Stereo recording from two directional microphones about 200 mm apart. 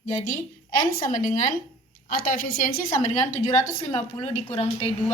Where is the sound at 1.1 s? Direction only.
40° left (ahead or behind).